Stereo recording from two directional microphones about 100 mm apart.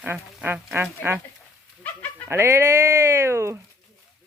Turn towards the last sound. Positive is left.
turn(degrees=-30)  # may be behind; listen again after turning